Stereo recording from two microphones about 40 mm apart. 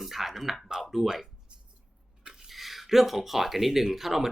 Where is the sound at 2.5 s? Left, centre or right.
Centre.